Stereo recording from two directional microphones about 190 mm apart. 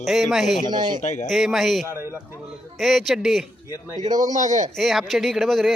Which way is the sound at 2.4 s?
Centre (ahead or behind).